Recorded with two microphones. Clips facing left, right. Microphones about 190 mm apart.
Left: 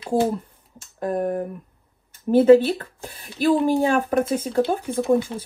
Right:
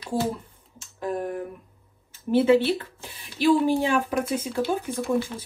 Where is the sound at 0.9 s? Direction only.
45° left (ahead or behind).